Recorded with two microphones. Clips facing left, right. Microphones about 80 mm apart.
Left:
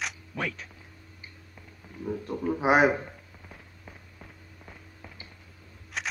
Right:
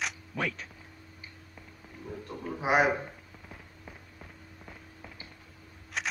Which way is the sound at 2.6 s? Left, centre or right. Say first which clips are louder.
Left 3 dB; left.